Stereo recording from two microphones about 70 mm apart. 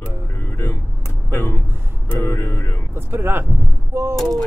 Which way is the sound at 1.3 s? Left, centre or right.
Left.